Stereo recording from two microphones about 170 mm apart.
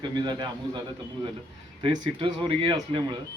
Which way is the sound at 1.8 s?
25° right (ahead or behind).